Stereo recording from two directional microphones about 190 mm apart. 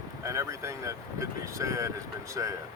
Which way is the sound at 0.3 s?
15° right (ahead or behind).